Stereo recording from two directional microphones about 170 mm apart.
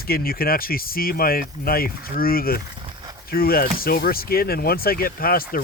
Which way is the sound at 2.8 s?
25° right (ahead or behind).